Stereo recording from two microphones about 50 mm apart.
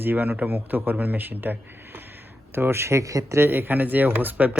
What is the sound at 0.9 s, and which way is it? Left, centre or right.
Speech, right.